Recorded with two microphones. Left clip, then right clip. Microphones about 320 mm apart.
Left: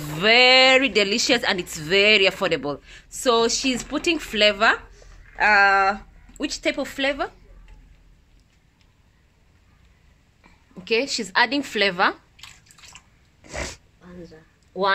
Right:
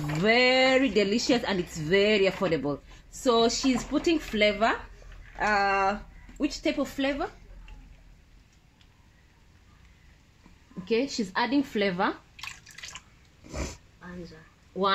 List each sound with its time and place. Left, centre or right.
0.2 s speech: left
10.8 s speech: left
13.5 s a sound: left